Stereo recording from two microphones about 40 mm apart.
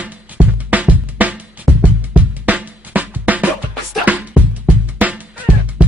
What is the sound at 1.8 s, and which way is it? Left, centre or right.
Music, right.